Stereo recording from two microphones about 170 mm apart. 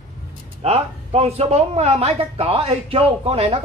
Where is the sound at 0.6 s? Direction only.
35° right (ahead or behind).